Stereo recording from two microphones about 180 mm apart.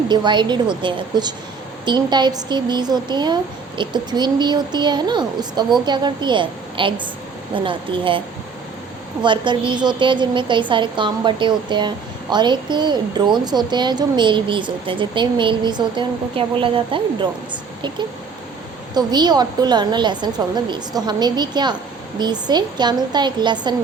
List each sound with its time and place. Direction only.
0.1 s a woman's voice: 25° right (ahead or behind)
9.2 s a woman's voice: 25° right (ahead or behind)